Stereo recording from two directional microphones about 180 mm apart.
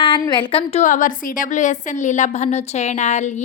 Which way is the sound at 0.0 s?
25° left (ahead or behind).